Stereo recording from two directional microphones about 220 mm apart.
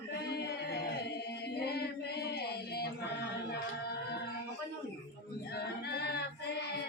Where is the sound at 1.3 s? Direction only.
50° left (ahead or behind).